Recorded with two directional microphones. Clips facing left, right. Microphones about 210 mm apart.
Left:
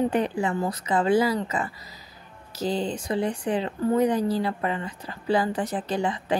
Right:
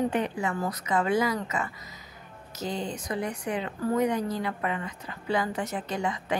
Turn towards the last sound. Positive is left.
turn(degrees=30)  # may be behind; listen again after turning